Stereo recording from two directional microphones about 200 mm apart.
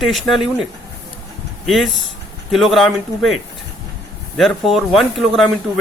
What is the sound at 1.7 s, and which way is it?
Speech, centre (ahead or behind).